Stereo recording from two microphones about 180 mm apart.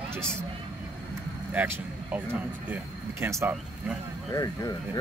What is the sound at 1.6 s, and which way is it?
Speech, 10° right (ahead or behind).